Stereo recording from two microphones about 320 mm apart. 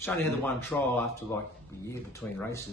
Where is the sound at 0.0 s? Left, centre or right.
Centre.